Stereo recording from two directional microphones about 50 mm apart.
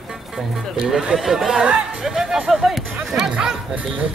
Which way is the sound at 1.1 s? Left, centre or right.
Centre.